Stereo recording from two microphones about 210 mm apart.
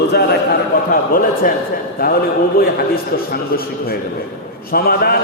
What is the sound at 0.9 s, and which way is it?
A man's voice, 45° left (ahead or behind).